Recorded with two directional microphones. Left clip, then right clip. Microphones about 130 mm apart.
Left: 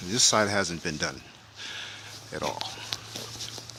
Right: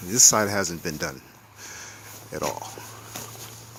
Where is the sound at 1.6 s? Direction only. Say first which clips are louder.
Left 3 dB; 5° right (ahead or behind).